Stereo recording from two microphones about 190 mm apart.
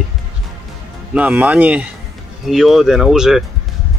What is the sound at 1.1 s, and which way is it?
Speech, 10° right (ahead or behind).